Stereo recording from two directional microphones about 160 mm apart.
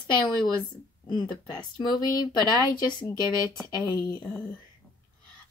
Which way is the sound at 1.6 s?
25° left (ahead or behind).